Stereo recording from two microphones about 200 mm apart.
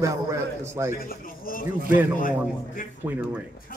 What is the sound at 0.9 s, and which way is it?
A man's voice, 45° left (ahead or behind).